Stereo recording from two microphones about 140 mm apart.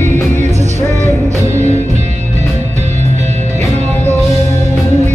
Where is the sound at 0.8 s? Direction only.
15° left (ahead or behind).